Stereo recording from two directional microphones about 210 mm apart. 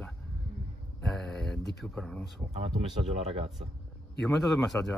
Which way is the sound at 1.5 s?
55° left (ahead or behind).